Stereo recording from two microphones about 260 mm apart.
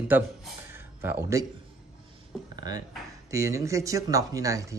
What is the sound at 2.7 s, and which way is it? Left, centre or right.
A man's voice, centre.